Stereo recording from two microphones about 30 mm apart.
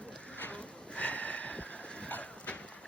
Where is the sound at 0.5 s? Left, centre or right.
Left.